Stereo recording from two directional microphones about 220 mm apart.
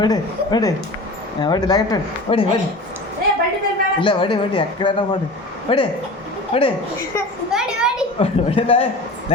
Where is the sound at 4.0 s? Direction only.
20° left (ahead or behind).